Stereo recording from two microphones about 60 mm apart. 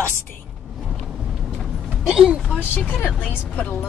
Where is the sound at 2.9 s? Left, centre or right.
Left.